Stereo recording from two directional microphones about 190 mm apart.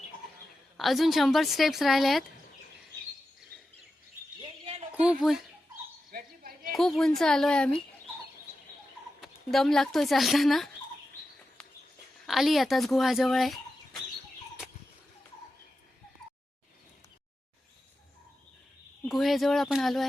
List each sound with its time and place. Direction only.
0.8 s speech: centre (ahead or behind)
4.4 s chirp: 30° right (ahead or behind)
6.1 s dog: 50° right (ahead or behind)
6.7 s speech: centre (ahead or behind)
9.2 s speech: centre (ahead or behind)
12.2 s speech: centre (ahead or behind)
19.0 s speech: centre (ahead or behind)